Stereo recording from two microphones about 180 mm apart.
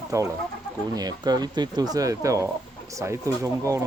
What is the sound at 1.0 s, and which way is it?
Speech, 20° right (ahead or behind).